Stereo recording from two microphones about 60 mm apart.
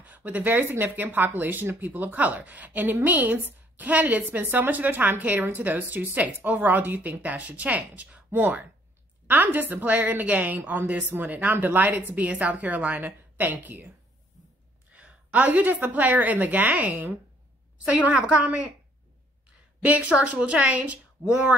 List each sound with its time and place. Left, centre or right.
0.0 s a woman's voice: right
14.9 s a woman's voice: right
19.8 s a woman's voice: right